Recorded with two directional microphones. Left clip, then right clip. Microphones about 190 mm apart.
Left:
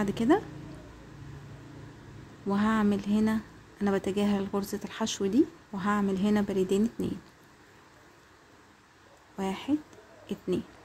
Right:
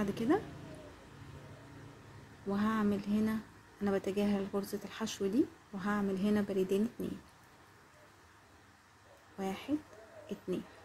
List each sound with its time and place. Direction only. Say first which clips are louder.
0.0 s speech: left 7 dB; 20° left (ahead or behind)
2.5 s speech: left 6 dB; 25° left (ahead or behind)
9.4 s speech: left 6 dB; 20° left (ahead or behind)